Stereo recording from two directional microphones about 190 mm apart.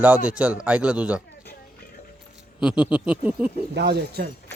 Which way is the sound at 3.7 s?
60° right (ahead or behind).